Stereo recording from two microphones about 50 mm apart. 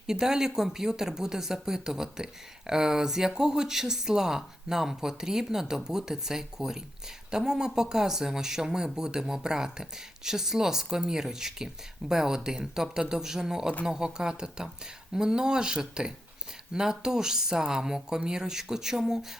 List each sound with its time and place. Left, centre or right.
0.1 s speech: centre